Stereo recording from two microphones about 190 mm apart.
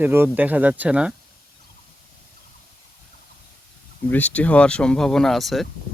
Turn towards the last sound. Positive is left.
turn(degrees=0)  # may be behind; listen again after turning